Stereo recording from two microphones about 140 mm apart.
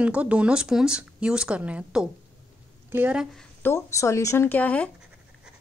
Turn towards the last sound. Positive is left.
turn(degrees=10)  # may be behind; listen again after turning